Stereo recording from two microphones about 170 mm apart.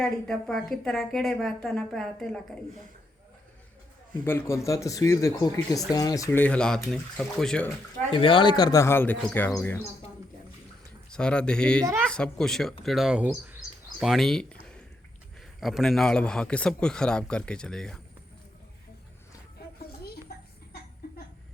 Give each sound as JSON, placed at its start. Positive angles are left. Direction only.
{"t": 0.0, "sound": "a woman's voice", "side_deg": 5}
{"t": 4.2, "sound": "speech", "side_deg": 15}
{"t": 8.1, "sound": "speech", "side_deg": 30}
{"t": 11.1, "sound": "a woman's voice", "side_deg": 5}
{"t": 15.6, "sound": "a woman's voice", "side_deg": 0}